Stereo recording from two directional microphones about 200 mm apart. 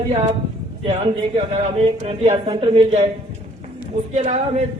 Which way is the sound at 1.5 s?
30° right (ahead or behind).